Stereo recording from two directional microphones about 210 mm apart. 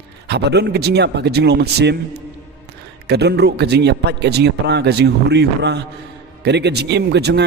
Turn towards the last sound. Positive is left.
turn(degrees=-55)  # may be behind; listen again after turning